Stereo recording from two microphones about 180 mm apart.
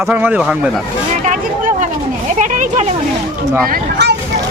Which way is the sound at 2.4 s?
45° right (ahead or behind).